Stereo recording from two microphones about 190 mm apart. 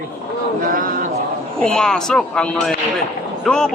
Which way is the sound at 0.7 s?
45° right (ahead or behind).